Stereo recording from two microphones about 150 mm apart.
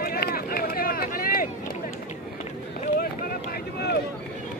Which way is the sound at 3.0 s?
75° left (ahead or behind).